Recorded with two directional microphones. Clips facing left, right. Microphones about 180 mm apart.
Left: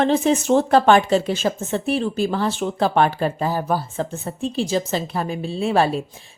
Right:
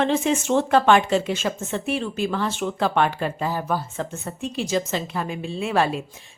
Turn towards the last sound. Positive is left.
turn(degrees=35)  # may be behind; listen again after turning